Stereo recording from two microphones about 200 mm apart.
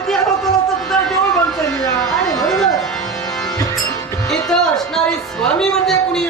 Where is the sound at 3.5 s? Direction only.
15° left (ahead or behind).